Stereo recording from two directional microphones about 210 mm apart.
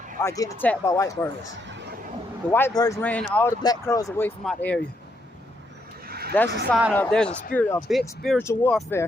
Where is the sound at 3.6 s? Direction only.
15° left (ahead or behind).